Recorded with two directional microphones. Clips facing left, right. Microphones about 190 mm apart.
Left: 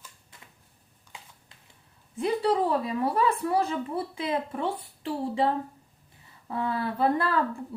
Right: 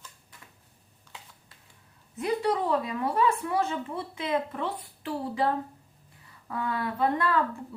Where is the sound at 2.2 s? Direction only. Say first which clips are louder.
Left 2 dB; 30° left (ahead or behind).